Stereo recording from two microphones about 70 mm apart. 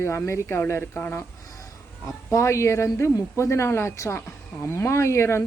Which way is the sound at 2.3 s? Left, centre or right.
Left.